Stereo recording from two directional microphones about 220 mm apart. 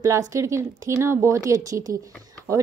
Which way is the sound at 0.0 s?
15° right (ahead or behind).